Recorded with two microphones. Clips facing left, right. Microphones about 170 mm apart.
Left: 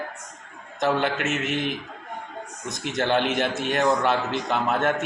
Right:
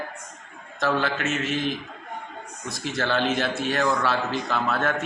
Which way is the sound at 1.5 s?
65° left (ahead or behind).